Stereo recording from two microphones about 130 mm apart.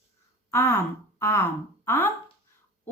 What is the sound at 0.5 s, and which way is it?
Speech, 20° left (ahead or behind).